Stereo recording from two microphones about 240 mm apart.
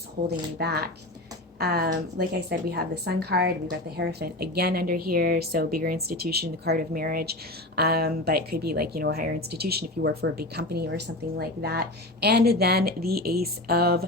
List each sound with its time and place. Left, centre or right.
0.3 s a woman's voice: right